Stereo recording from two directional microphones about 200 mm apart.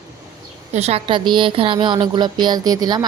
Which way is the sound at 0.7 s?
30° right (ahead or behind).